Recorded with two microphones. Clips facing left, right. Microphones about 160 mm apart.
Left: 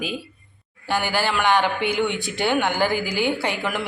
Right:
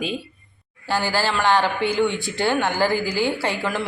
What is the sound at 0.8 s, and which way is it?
A man's voice, 15° left (ahead or behind).